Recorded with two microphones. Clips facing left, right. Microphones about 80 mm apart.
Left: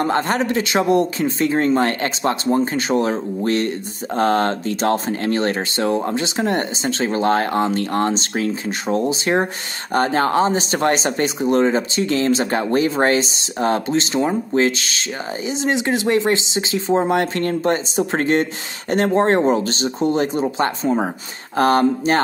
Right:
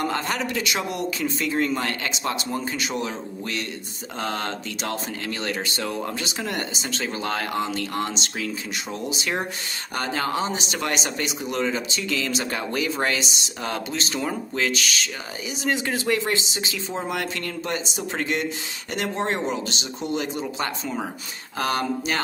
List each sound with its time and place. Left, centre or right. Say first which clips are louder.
0.0 s speech: left 7 dB; left